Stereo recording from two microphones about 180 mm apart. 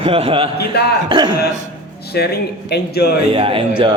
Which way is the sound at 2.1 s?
60° left (ahead or behind).